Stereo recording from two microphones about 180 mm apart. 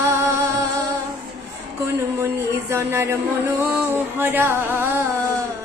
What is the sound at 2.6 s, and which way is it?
Speech, 15° right (ahead or behind).